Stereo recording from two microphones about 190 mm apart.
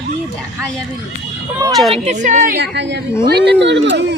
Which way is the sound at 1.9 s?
35° right (ahead or behind).